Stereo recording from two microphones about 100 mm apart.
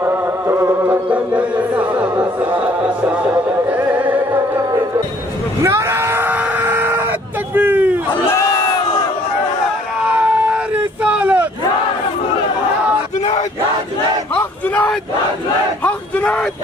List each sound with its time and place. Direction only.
0.0 s insect: 25° right (ahead or behind)
1.1 s music: 15° right (ahead or behind)
5.6 s screaming: 30° right (ahead or behind)
10.0 s a sound: 15° right (ahead or behind)
14.3 s battle cry: 15° left (ahead or behind)
15.8 s crowd: 15° left (ahead or behind)